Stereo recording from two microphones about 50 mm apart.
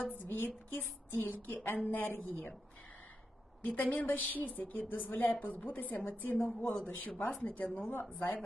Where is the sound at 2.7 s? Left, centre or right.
Left.